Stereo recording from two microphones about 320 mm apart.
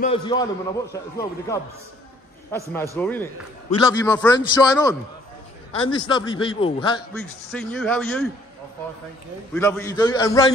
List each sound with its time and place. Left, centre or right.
0.0 s a man's voice: centre
7.2 s speech: centre
9.5 s a man's voice: centre